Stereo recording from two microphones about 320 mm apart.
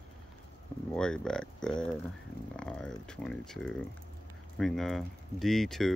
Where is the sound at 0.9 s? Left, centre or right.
Centre.